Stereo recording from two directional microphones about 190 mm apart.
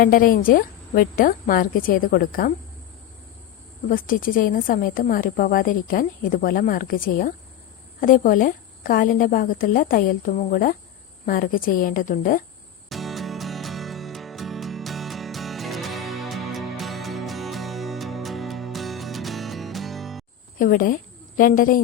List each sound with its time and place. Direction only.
0.0 s a woman's voice: 50° left (ahead or behind)
3.8 s a woman's voice: 45° left (ahead or behind)
12.9 s music: centre (ahead or behind)
20.6 s a woman's voice: 45° left (ahead or behind)